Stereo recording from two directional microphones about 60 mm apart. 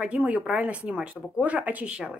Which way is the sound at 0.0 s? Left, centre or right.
Right.